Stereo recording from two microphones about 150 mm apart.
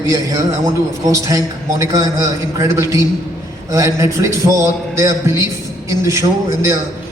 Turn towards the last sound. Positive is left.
turn(degrees=-20)  # may be behind; listen again after turning